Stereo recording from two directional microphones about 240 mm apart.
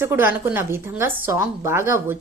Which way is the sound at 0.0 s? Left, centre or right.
Centre.